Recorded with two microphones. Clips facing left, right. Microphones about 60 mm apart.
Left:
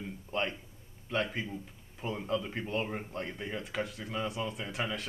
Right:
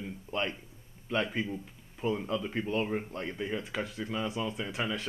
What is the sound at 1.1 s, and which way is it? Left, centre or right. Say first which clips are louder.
Speech: right 2 dB; centre.